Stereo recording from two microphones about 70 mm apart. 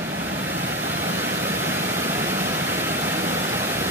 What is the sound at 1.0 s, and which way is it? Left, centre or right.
Vehicle, right.